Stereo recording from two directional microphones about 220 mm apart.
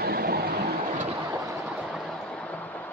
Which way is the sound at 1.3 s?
10° right (ahead or behind).